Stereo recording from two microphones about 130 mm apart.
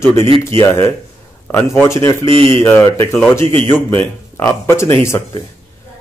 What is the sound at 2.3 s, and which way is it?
Speech, 45° right (ahead or behind).